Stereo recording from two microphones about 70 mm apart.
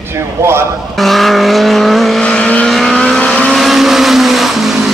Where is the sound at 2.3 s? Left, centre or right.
Centre.